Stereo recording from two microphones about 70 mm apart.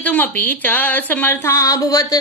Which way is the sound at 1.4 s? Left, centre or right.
Left.